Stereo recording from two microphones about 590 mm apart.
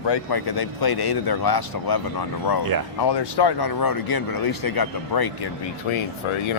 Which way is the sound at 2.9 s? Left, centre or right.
Left.